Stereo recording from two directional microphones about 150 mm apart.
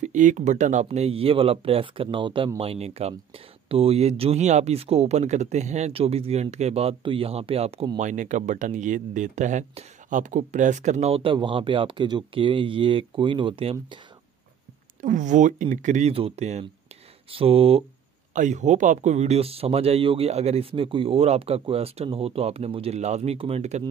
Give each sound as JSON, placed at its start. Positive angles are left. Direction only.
{"t": 0.0, "sound": "speech", "side_deg": -55}
{"t": 8.0, "sound": "speech", "side_deg": -55}
{"t": 15.0, "sound": "speech", "side_deg": -60}
{"t": 18.3, "sound": "speech", "side_deg": -55}